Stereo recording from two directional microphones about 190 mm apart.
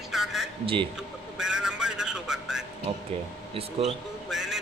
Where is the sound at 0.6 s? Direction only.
25° right (ahead or behind).